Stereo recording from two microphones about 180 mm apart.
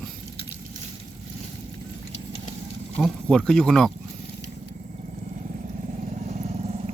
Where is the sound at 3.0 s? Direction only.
5° left (ahead or behind).